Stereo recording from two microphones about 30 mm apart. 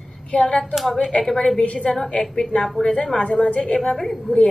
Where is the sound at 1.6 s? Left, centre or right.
Left.